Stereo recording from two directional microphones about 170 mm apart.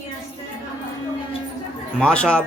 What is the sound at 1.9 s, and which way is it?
Speech, 5° left (ahead or behind).